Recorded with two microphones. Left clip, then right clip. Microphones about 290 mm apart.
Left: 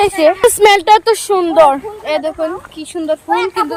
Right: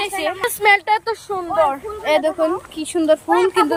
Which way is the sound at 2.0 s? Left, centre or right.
Centre.